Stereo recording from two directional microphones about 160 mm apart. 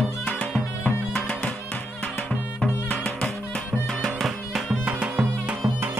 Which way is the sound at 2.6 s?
5° left (ahead or behind).